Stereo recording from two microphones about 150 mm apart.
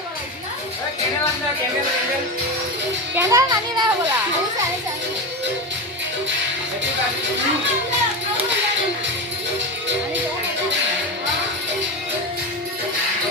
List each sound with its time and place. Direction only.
3.2 s a child's voice: 20° right (ahead or behind)